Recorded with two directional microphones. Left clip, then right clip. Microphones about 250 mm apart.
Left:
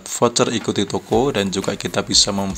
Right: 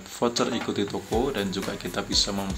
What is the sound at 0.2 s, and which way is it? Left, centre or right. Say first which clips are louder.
A man's voice: left 8 dB; left.